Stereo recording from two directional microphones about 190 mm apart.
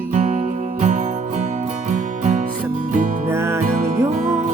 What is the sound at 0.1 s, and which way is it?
Music, 45° right (ahead or behind).